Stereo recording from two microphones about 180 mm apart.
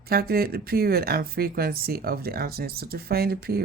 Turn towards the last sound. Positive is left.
turn(degrees=-60)  # may be behind; listen again after turning